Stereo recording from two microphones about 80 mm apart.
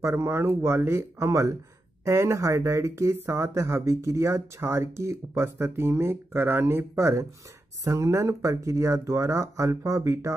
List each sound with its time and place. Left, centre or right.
0.0 s speech: right